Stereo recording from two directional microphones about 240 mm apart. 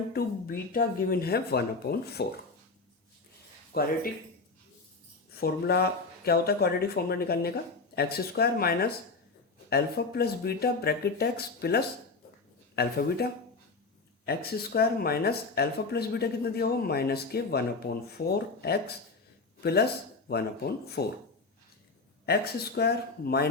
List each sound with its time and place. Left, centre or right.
0.1 s speech: left
3.7 s speech: left
5.3 s speech: left
22.3 s speech: left